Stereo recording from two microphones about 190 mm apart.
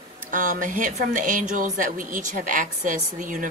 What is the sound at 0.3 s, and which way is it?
Speech, 45° right (ahead or behind).